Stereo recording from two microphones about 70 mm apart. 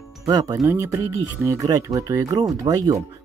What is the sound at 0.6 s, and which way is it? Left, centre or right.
Speech, right.